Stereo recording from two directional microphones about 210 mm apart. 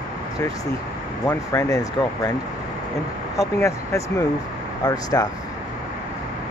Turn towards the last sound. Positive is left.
turn(degrees=20)  # may be behind; listen again after turning